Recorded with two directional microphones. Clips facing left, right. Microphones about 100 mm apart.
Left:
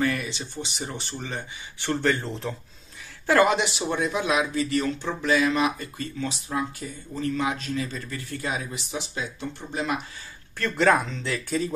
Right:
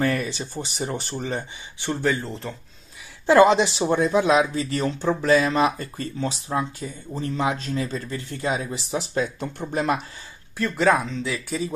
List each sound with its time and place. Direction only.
0.0 s speech: 40° right (ahead or behind)
1.8 s speech: 10° right (ahead or behind)
3.3 s speech: 25° right (ahead or behind); by 9.9 s 45° right (ahead or behind)
10.6 s speech: 5° right (ahead or behind)